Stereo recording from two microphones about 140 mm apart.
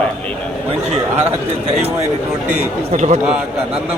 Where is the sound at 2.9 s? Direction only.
55° right (ahead or behind).